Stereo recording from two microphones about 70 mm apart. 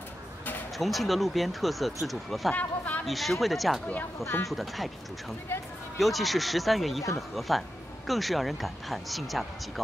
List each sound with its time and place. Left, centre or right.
0.7 s speech: centre
2.5 s speech: left
3.1 s speech: centre
5.9 s speech: centre